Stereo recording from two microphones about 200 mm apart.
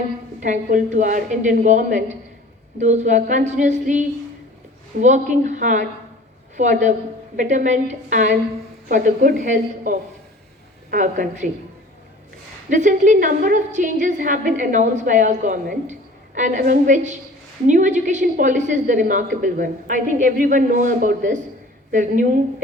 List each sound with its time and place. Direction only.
0.3 s a woman's voice: 40° right (ahead or behind)
12.7 s a woman's voice: 40° right (ahead or behind)